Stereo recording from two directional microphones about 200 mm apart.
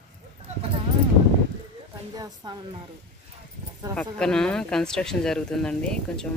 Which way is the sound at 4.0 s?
5° left (ahead or behind).